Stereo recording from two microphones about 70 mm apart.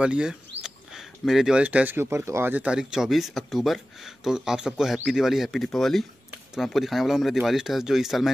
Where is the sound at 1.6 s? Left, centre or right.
Right.